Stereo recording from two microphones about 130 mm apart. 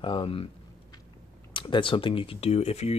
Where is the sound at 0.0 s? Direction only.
40° left (ahead or behind).